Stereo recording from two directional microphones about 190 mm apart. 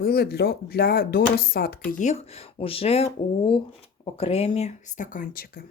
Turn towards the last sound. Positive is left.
turn(degrees=50)  # may be behind; listen again after turning